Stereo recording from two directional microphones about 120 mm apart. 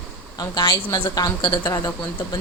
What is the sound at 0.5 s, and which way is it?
A woman's voice, 35° left (ahead or behind).